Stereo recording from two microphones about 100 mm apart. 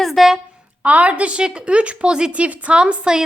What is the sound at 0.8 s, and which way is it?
A woman's voice, 15° right (ahead or behind).